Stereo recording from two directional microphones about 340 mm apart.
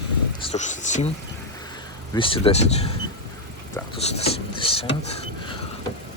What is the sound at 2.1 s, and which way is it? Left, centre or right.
Speech, centre.